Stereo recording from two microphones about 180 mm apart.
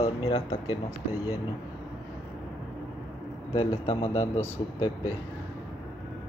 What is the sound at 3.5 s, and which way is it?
Speech, 30° left (ahead or behind).